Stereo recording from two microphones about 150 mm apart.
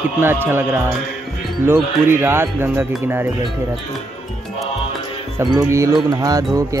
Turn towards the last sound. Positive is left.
turn(degrees=-25)  # may be behind; listen again after turning